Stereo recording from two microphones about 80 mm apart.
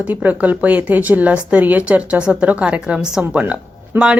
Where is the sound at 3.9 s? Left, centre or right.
Right.